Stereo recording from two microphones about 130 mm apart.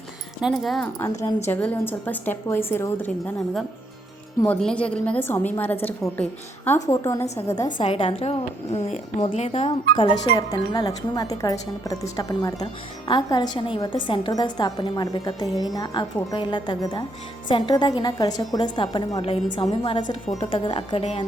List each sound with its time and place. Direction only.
0.4 s speech: centre (ahead or behind)
1.5 s a woman's voice: 15° left (ahead or behind)
4.4 s a woman's voice: 10° left (ahead or behind)
6.8 s speech: 25° left (ahead or behind)
7.9 s a woman's voice: 45° left (ahead or behind)